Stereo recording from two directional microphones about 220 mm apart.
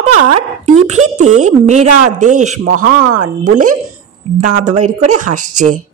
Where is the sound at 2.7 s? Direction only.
90° right.